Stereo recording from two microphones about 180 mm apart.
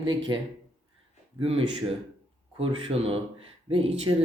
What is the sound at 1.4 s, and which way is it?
Speech, 30° right (ahead or behind).